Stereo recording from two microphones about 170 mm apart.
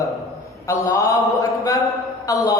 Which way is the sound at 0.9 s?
20° left (ahead or behind).